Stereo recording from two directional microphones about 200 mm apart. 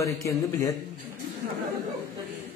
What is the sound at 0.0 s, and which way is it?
Speech, 15° left (ahead or behind).